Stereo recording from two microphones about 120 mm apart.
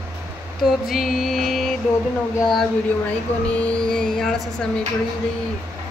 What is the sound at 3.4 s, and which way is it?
Speech, 10° left (ahead or behind).